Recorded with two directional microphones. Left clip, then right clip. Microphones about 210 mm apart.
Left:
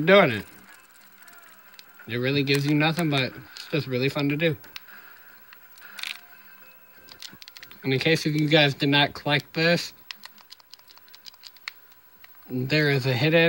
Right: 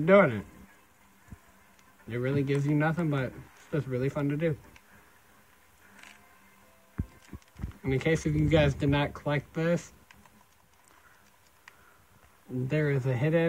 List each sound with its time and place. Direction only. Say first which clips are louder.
0.0 s speech: left 4 dB; 50° left (ahead or behind)
2.0 s speech: left 6 dB; 45° left (ahead or behind)
7.3 s speech: left 6 dB; 40° left (ahead or behind)
12.6 s speech: left 7 dB; 45° left (ahead or behind)